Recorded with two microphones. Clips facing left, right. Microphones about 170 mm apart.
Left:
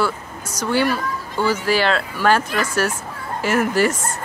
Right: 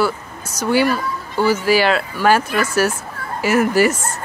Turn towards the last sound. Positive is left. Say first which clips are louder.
# right 3 dB
turn(degrees=-5)  # may be behind; listen again after turning